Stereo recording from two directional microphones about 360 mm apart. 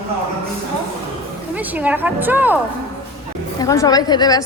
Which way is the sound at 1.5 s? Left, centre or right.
Centre.